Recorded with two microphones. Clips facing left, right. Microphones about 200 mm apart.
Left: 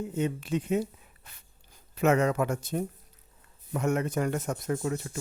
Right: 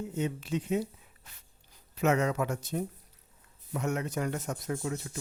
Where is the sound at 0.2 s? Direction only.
55° left (ahead or behind).